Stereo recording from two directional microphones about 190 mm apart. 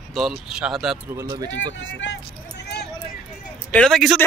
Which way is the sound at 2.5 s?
60° left (ahead or behind).